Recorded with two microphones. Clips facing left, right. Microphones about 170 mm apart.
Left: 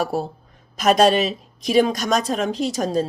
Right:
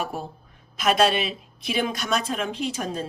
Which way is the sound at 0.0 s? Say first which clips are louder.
Left 7 dB; 35° left (ahead or behind).